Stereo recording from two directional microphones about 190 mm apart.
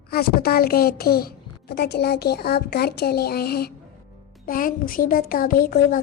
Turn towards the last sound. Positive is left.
turn(degrees=50)  # may be behind; listen again after turning